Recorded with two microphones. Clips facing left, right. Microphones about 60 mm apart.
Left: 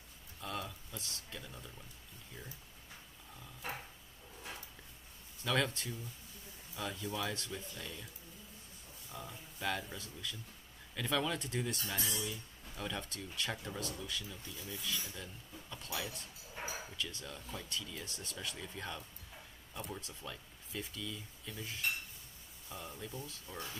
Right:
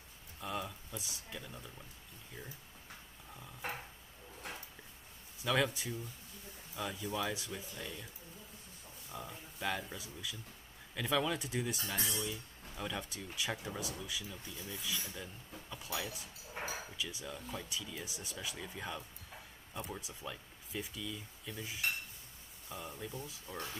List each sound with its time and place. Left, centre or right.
0.4 s a sound: centre
1.4 s speech: centre
5.4 s speech: centre
9.1 s speech: centre